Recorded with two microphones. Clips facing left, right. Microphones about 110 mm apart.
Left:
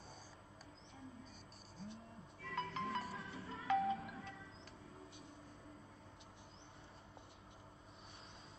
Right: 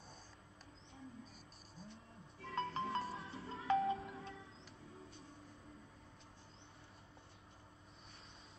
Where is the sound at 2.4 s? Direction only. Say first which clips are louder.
Right 2 dB; 30° right (ahead or behind).